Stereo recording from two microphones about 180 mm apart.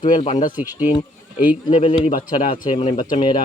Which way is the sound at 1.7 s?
30° left (ahead or behind).